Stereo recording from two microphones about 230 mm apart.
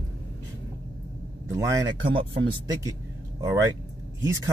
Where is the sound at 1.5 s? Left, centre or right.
Centre.